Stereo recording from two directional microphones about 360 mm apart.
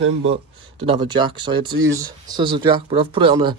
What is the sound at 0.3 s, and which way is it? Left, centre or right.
Speech, centre.